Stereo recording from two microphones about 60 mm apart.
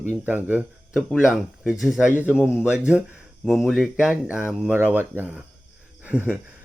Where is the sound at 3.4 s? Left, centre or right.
Centre.